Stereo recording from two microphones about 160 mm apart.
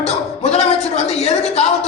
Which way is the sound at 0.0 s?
40° left (ahead or behind).